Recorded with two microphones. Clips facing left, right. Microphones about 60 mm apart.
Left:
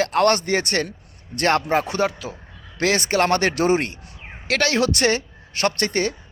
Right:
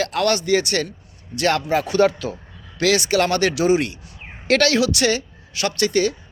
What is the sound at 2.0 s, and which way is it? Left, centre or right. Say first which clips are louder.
Speech: right 6 dB; centre.